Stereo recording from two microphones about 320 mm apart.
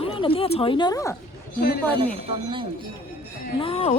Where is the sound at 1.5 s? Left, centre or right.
Left.